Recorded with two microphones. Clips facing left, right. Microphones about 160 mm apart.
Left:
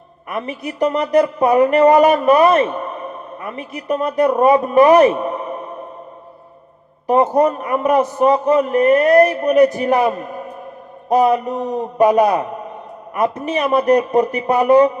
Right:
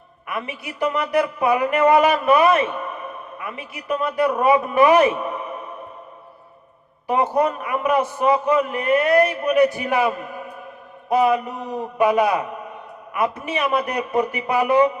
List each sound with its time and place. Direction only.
0.3 s a man's voice: 40° left (ahead or behind)
7.1 s a man's voice: 40° left (ahead or behind)